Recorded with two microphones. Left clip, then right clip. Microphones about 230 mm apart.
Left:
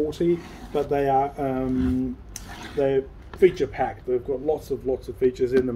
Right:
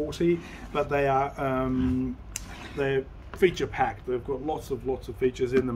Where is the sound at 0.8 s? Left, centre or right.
Centre.